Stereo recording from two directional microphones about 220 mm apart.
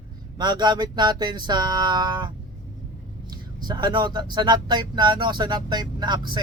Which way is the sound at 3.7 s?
20° right (ahead or behind).